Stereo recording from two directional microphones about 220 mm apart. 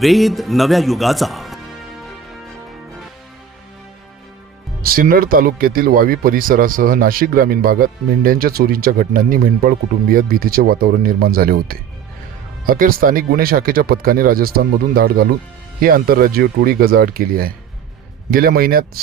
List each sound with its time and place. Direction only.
0.0 s speech: centre (ahead or behind)
4.8 s speech: 40° right (ahead or behind)